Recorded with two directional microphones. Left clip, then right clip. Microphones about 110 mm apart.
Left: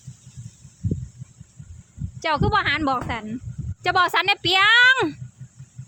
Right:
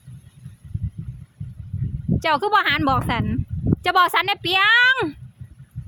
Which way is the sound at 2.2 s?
30° right (ahead or behind).